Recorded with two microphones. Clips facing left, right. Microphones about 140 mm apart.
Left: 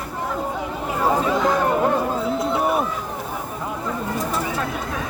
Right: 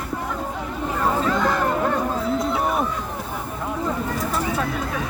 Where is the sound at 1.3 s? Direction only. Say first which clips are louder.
Left 2 dB; 5° left (ahead or behind).